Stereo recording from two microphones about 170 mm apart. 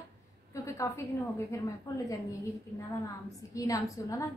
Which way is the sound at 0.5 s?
20° left (ahead or behind).